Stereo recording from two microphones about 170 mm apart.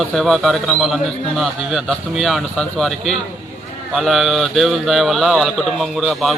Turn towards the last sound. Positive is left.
turn(degrees=0)  # may be behind; listen again after turning